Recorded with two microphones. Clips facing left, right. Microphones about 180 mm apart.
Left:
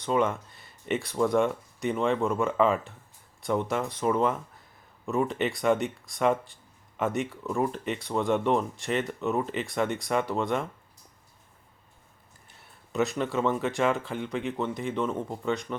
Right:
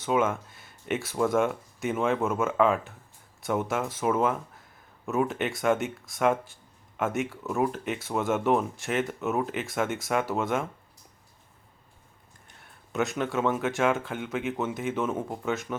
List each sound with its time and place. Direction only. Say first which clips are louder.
0.0 s speech: even; 5° right (ahead or behind)
12.5 s speech: left 1 dB; centre (ahead or behind)